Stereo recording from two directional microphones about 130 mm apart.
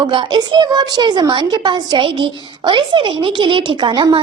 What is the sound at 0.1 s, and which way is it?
A woman's voice, 35° right (ahead or behind).